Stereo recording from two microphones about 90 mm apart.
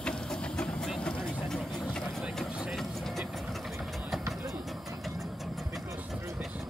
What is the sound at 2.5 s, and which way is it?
Engine, 5° right (ahead or behind).